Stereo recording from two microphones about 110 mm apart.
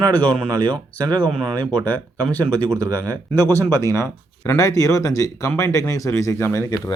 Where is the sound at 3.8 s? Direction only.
25° left (ahead or behind).